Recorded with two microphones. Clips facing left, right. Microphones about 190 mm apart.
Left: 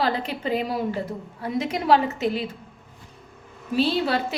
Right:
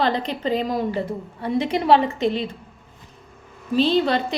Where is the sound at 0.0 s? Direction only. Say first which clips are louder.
Right 3 dB; 5° left (ahead or behind).